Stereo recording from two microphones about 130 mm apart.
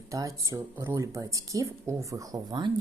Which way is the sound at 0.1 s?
25° right (ahead or behind).